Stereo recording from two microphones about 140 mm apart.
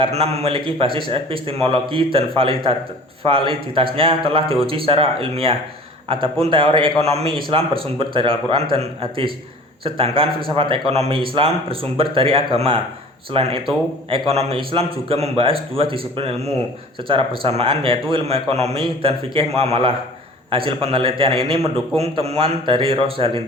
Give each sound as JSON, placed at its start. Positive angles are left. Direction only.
{"t": 0.0, "sound": "a man's voice", "side_deg": -45}